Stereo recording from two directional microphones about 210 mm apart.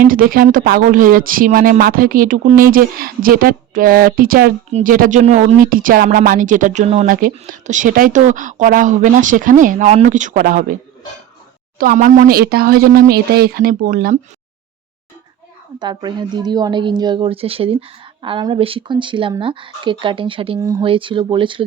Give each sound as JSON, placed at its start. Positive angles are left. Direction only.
{"t": 0.0, "sound": "speech", "side_deg": -45}
{"t": 11.8, "sound": "speech", "side_deg": -40}
{"t": 15.8, "sound": "a woman's voice", "side_deg": -20}